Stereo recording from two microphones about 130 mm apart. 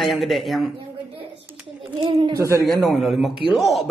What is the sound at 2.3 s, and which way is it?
Speech, 25° right (ahead or behind).